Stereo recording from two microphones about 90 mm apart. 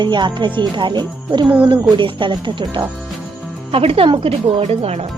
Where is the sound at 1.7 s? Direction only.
65° right (ahead or behind).